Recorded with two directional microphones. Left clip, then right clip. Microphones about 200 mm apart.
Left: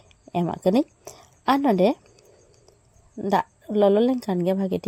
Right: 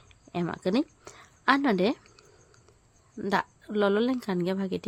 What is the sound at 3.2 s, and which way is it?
A woman's voice, 5° left (ahead or behind).